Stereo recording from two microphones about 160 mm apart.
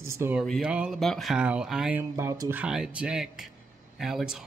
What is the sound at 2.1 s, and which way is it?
Speech, 20° right (ahead or behind).